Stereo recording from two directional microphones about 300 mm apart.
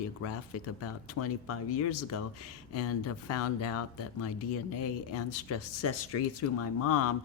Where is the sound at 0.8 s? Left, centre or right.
Left.